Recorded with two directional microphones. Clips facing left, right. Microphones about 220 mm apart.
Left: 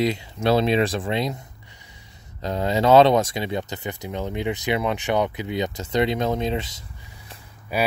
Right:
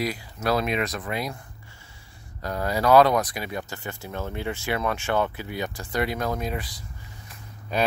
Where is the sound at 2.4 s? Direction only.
20° left (ahead or behind).